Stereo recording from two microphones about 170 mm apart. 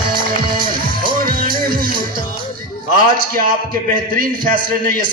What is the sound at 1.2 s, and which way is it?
Music, 60° right (ahead or behind).